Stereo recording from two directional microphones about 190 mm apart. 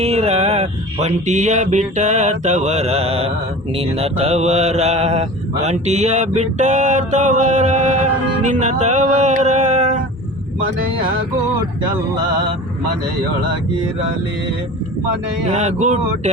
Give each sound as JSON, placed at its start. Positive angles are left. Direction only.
{"t": 0.0, "sound": "mantra", "side_deg": -35}
{"t": 8.4, "sound": "music", "side_deg": -40}
{"t": 15.5, "sound": "mantra", "side_deg": -40}